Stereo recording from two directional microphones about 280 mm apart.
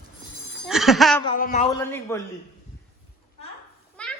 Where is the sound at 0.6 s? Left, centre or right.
Centre.